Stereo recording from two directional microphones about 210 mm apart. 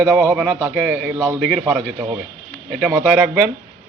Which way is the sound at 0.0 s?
10° right (ahead or behind).